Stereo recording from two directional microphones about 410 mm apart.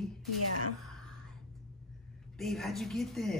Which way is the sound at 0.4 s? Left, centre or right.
Left.